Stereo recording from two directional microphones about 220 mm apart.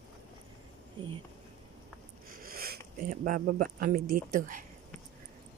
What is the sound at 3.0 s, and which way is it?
A woman's voice, 40° right (ahead or behind).